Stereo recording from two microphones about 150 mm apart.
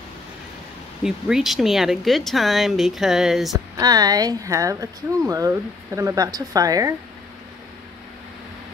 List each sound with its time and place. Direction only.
1.0 s speech: centre (ahead or behind)
3.5 s speech: 25° right (ahead or behind)